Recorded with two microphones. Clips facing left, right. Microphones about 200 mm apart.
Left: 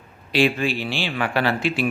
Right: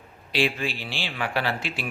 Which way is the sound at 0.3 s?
55° left (ahead or behind).